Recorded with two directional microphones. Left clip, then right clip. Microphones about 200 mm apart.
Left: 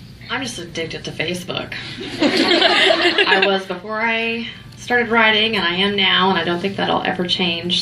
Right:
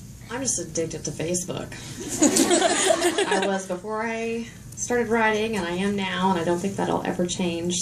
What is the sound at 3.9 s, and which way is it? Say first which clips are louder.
A woman's voice: left 9 dB; 40° left (ahead or behind).